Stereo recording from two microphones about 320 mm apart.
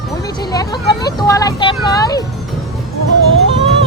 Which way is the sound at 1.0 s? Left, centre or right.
Centre.